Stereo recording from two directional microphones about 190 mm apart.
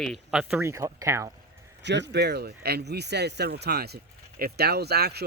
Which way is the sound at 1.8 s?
65° right (ahead or behind).